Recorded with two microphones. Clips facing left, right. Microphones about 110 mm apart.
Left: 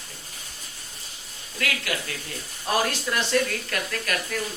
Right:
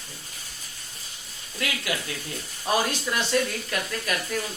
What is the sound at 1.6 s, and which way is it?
Speech, 20° right (ahead or behind).